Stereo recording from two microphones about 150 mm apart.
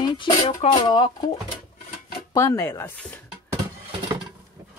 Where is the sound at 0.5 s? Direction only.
55° left (ahead or behind).